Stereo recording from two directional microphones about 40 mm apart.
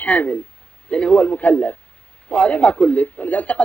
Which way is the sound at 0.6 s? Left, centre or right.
Left.